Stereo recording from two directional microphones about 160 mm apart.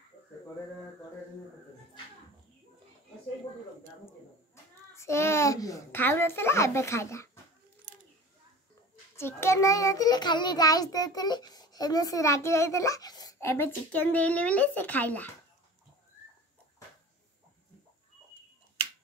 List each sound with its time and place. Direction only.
4.9 s a child's voice: 15° left (ahead or behind)
9.1 s a child's voice: 15° left (ahead or behind)